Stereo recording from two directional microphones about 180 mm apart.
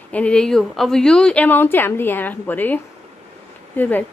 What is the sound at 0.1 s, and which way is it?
A woman's voice, 5° left (ahead or behind).